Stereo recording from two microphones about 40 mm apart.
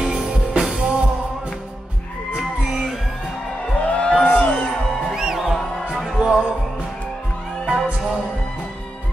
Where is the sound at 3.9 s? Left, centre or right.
Left.